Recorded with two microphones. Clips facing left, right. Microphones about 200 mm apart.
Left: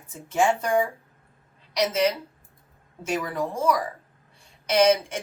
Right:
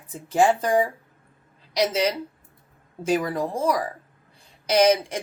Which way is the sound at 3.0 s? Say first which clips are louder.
Right 4 dB; 35° right (ahead or behind).